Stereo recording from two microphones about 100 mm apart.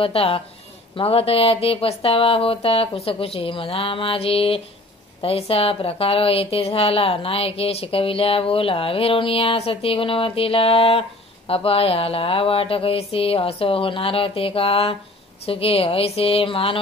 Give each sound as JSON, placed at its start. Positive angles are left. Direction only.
{"t": 0.0, "sound": "a woman's voice", "side_deg": 70}